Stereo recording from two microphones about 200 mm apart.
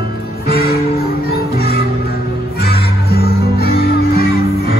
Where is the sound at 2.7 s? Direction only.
50° left (ahead or behind).